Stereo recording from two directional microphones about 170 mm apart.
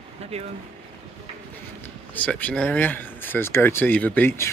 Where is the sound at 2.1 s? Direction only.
10° left (ahead or behind).